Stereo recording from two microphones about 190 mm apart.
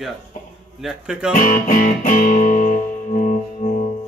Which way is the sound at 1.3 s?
45° left (ahead or behind).